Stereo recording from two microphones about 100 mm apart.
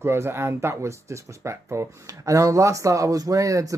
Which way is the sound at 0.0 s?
25° right (ahead or behind).